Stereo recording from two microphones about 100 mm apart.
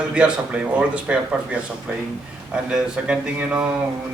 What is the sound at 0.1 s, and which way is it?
A man's voice, 10° right (ahead or behind).